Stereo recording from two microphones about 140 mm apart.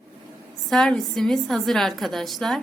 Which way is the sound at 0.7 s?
5° left (ahead or behind).